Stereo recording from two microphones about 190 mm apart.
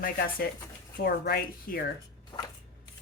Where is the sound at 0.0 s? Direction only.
50° left (ahead or behind).